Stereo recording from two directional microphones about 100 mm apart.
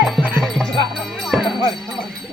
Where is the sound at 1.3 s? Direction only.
10° right (ahead or behind).